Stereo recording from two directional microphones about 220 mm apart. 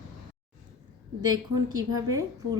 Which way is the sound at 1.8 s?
15° right (ahead or behind).